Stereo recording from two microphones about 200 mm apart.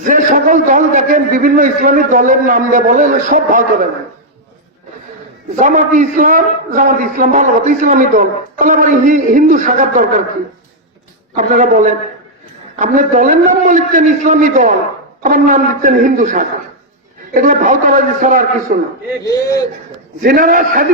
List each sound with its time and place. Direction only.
0.0 s a man's voice: 45° right (ahead or behind)
5.5 s a man's voice: 40° right (ahead or behind)
11.3 s a man's voice: 40° right (ahead or behind)
19.2 s a man's voice: 15° left (ahead or behind)
20.2 s a man's voice: 45° right (ahead or behind)